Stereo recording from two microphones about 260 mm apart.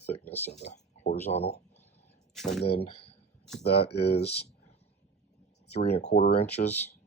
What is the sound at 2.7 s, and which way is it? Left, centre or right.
Speech, left.